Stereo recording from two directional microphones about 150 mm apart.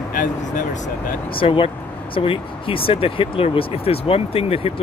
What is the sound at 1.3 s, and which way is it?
Speech, 35° left (ahead or behind).